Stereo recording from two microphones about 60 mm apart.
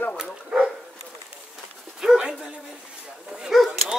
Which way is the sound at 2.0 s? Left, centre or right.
Centre.